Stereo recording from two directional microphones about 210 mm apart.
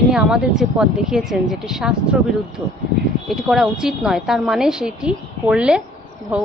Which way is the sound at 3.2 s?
Centre (ahead or behind).